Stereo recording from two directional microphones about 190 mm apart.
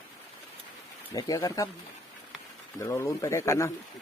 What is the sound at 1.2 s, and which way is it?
Speech, 20° left (ahead or behind).